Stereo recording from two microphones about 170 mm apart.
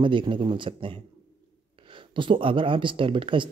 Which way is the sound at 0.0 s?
30° right (ahead or behind).